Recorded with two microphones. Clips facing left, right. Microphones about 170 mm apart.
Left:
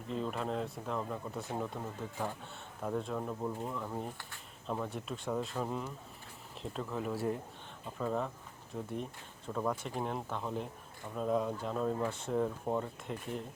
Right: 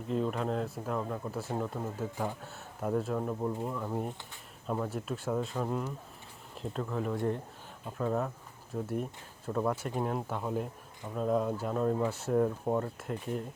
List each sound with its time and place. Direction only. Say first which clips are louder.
0.1 s speech: right 4 dB; centre (ahead or behind)